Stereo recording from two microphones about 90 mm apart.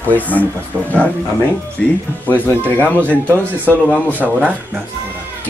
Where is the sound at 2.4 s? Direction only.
20° left (ahead or behind).